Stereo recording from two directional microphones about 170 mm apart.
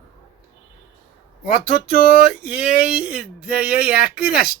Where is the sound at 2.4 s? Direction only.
5° right (ahead or behind).